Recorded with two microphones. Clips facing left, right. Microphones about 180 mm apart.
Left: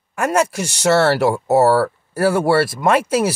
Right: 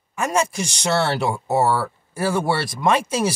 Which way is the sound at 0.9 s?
75° left (ahead or behind).